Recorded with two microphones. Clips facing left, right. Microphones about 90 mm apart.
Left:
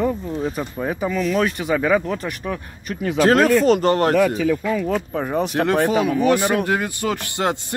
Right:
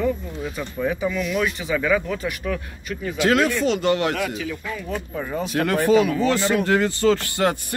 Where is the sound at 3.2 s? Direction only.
40° left (ahead or behind).